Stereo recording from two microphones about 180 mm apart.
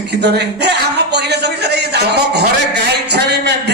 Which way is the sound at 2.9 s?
65° right (ahead or behind).